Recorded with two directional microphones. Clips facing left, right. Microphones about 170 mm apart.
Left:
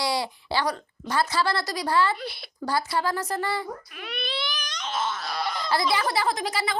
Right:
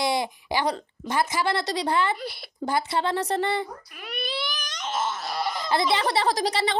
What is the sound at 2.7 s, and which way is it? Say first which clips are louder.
Speech: right 1 dB; 20° right (ahead or behind).